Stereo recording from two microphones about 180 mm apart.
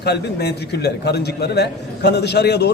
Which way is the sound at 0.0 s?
65° left (ahead or behind).